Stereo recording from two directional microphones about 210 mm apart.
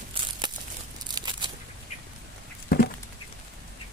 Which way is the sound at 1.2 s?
20° right (ahead or behind).